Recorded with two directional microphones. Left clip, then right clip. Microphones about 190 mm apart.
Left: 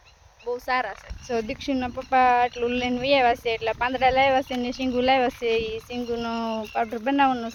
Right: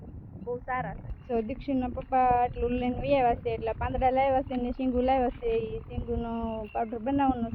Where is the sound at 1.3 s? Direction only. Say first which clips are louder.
Left 3 dB; 5° left (ahead or behind).